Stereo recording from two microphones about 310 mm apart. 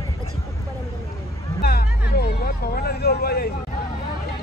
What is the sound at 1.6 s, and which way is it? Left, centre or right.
Speech, left.